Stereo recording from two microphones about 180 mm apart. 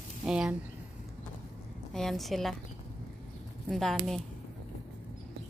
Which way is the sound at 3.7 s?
Centre (ahead or behind).